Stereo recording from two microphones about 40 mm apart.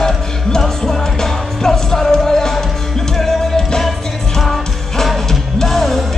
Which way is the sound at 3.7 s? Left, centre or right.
Centre.